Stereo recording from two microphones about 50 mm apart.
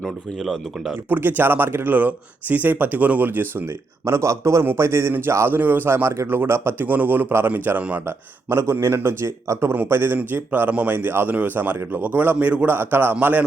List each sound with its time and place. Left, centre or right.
0.3 s speech: centre
1.1 s speech: right
4.0 s a man's voice: right
4.6 s a man's voice: right
5.5 s speech: right
6.8 s speech: right
8.0 s a man's voice: right
8.9 s speech: right
9.2 s a man's voice: right
9.9 s speech: right
10.7 s speech: right
12.6 s speech: right